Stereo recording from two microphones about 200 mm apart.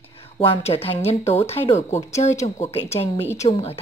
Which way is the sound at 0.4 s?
30° left (ahead or behind).